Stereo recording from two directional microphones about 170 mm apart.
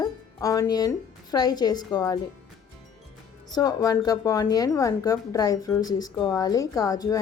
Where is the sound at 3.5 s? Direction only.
20° left (ahead or behind).